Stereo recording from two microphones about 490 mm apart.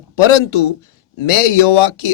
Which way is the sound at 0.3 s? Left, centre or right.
Left.